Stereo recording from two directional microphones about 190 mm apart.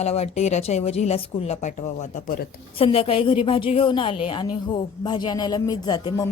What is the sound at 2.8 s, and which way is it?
A woman's voice, 30° left (ahead or behind).